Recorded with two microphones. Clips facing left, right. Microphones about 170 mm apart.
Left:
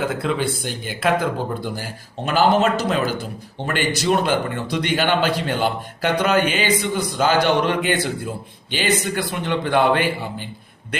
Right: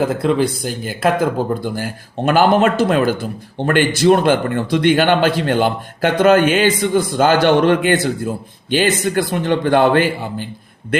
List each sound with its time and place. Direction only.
0.0 s speech: 40° right (ahead or behind)
1.6 s a man's voice: 55° right (ahead or behind)